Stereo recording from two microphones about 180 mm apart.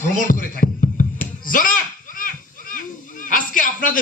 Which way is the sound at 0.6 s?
50° left (ahead or behind).